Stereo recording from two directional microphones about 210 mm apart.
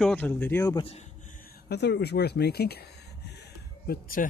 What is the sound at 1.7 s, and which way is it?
Speech, 55° left (ahead or behind).